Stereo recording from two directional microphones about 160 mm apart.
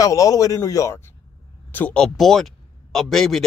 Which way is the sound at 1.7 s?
10° left (ahead or behind).